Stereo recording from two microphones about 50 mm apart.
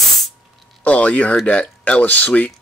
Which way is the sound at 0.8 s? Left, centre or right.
Left.